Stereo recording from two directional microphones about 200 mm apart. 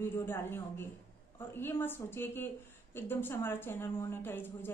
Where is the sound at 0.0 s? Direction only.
10° left (ahead or behind).